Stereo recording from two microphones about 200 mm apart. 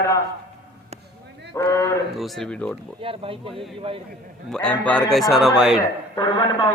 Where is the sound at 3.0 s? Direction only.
25° right (ahead or behind).